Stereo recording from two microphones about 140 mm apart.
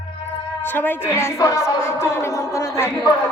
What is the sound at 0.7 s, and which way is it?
Speech, 15° left (ahead or behind).